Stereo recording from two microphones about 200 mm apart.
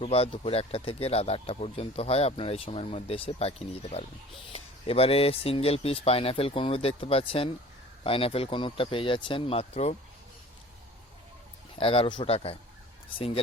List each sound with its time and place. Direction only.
0.0 s speech: 30° left (ahead or behind)
11.8 s speech: 25° left (ahead or behind)